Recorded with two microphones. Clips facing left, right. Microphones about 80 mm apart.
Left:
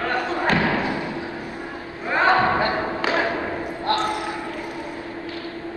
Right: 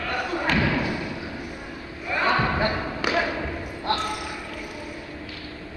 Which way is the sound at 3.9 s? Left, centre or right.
Right.